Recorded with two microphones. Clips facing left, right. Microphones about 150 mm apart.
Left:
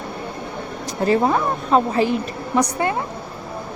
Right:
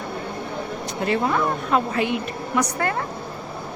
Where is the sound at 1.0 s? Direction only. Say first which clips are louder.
Left 4 dB; 35° left (ahead or behind).